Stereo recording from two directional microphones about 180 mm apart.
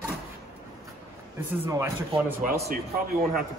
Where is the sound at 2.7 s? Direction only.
55° right (ahead or behind).